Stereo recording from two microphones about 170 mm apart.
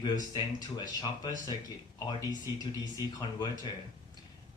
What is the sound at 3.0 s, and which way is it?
Speech, 20° left (ahead or behind).